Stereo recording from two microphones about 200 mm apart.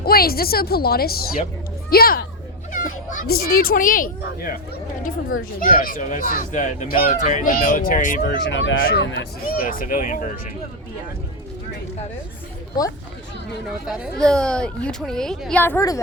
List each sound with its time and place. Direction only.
0.0 s speech: 50° left (ahead or behind)
5.5 s speech: 45° left (ahead or behind)
8.2 s speech: 60° left (ahead or behind)
8.8 s speech: 55° left (ahead or behind)
9.6 s speech: 40° left (ahead or behind)
13.8 s speech: 5° right (ahead or behind); by 16.0 s 15° left (ahead or behind)